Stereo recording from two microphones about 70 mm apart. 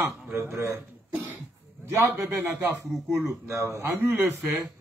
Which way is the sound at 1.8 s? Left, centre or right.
Right.